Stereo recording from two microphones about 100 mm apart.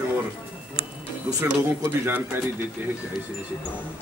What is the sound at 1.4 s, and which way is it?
Speech, 30° right (ahead or behind).